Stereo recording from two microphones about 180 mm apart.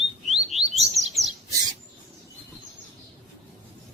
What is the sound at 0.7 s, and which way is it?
Bird, 35° right (ahead or behind).